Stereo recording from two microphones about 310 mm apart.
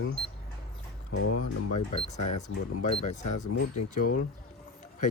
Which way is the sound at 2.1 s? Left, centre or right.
Left.